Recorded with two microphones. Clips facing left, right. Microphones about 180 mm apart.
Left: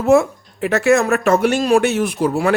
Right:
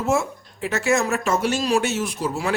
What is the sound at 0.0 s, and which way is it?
Speech, 60° left (ahead or behind).